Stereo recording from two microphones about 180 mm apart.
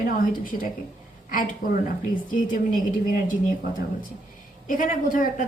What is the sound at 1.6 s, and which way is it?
Speech, 50° left (ahead or behind).